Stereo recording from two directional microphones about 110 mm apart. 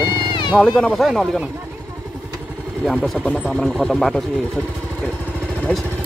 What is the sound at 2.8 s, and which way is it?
Speech, 5° left (ahead or behind).